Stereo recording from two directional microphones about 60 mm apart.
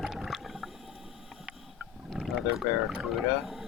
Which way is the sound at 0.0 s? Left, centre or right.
Centre.